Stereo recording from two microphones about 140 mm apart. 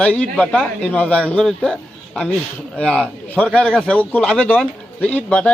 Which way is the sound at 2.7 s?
5° left (ahead or behind).